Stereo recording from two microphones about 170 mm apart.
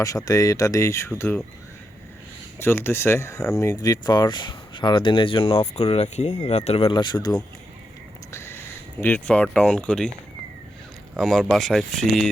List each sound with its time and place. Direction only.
0.0 s speech: 20° left (ahead or behind)
2.6 s speech: 15° left (ahead or behind)
11.1 s speech: centre (ahead or behind)